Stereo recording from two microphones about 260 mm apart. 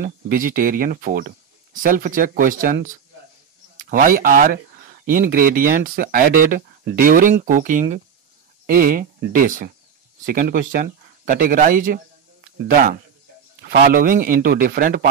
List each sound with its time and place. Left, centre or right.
0.0 s speech: right
13.6 s speech: right